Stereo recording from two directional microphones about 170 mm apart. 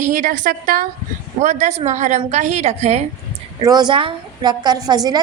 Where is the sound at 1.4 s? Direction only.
45° right (ahead or behind).